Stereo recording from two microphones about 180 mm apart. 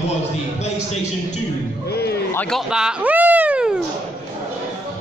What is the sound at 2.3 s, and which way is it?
Speech, 10° left (ahead or behind).